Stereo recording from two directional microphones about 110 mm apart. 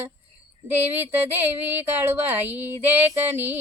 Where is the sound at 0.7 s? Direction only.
20° right (ahead or behind).